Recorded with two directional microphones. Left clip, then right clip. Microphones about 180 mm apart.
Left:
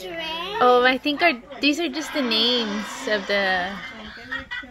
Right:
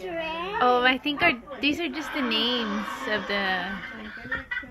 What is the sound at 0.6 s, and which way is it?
Speech, 35° left (ahead or behind).